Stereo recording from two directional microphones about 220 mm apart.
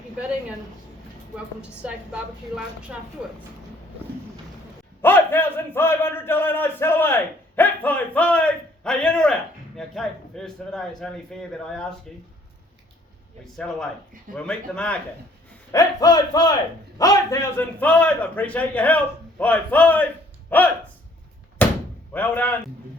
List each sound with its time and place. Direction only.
1.8 s a woman's voice: 5° right (ahead or behind)
5.0 s speech: 10° left (ahead or behind)
14.3 s speech: 5° left (ahead or behind)
15.7 s speech: 15° left (ahead or behind)
21.6 s door: 10° left (ahead or behind)
22.1 s speech: 5° left (ahead or behind)